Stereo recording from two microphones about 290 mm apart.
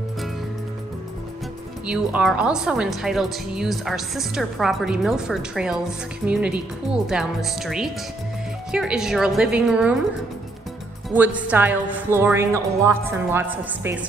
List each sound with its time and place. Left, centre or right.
1.9 s a woman's voice: centre
11.1 s a woman's voice: centre